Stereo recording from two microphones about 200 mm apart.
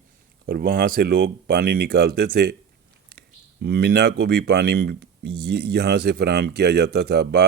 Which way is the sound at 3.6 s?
55° right (ahead or behind).